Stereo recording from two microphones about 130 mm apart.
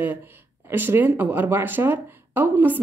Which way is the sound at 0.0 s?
15° right (ahead or behind).